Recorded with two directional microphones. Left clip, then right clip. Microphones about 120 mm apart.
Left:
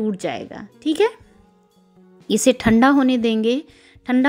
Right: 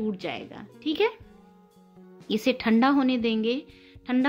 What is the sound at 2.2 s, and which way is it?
Speech, 55° left (ahead or behind).